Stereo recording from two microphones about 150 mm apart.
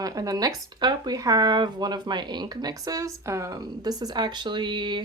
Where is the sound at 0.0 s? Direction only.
25° right (ahead or behind).